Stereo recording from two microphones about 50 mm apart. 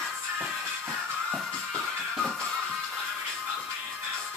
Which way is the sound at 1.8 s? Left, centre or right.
Centre.